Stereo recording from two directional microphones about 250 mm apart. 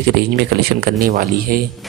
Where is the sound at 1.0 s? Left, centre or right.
Right.